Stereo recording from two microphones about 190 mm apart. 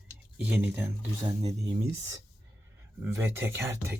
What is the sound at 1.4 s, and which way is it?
Speech, 30° right (ahead or behind).